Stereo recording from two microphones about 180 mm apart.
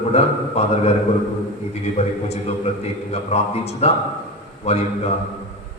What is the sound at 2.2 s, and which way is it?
A man's voice, 35° left (ahead or behind).